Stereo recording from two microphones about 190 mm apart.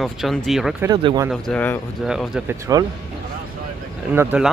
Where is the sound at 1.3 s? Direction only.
5° left (ahead or behind).